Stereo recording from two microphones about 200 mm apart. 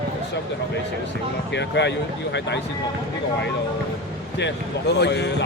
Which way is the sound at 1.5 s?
60° left (ahead or behind).